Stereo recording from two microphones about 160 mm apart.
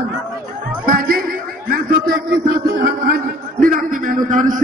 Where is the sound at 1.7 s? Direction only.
65° right (ahead or behind).